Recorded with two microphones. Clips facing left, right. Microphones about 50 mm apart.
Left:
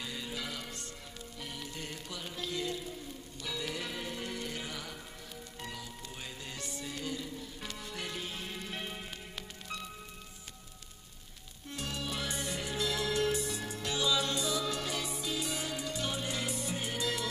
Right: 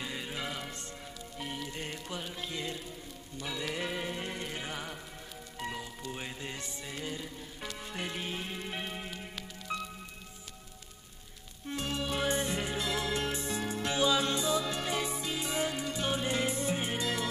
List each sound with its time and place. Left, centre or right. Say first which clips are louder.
0.0 s music: right 2 dB; right
5.6 s speech: right 6 dB; right
6.1 s music: right 2 dB; right
11.7 s music: right 4 dB; right